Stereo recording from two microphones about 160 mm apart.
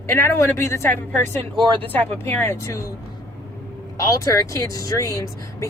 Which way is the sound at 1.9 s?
15° left (ahead or behind).